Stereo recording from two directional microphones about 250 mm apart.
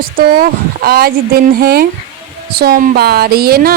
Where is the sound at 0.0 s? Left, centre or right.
Right.